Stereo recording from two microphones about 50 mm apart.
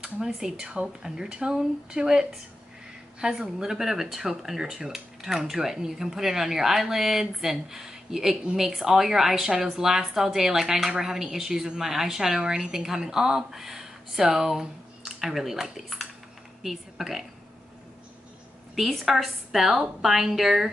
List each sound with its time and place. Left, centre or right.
0.0 s a woman's voice: centre
18.8 s a woman's voice: centre